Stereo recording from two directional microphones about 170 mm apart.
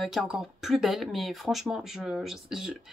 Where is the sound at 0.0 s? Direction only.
Centre (ahead or behind).